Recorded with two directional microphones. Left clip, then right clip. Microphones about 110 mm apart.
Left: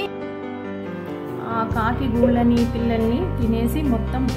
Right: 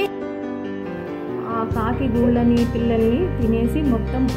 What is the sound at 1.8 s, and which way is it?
Speech, centre (ahead or behind).